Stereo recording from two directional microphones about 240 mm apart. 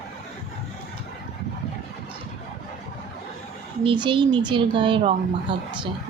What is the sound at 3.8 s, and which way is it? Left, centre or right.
Speech, centre.